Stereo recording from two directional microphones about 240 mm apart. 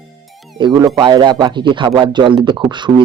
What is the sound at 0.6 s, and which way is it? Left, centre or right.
Speech, centre.